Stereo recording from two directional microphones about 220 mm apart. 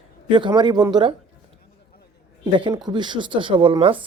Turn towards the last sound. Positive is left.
turn(degrees=-20)  # may be behind; listen again after turning